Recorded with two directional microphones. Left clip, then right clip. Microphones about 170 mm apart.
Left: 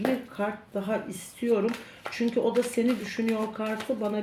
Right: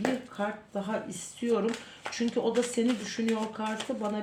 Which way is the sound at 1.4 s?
25° right (ahead or behind).